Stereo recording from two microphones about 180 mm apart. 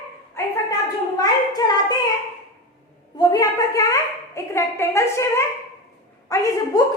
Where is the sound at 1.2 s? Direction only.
20° left (ahead or behind).